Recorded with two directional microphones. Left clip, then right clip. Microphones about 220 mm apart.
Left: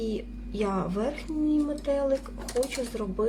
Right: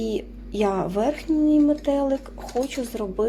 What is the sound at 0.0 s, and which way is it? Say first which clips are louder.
A woman's voice: right 5 dB; 25° right (ahead or behind).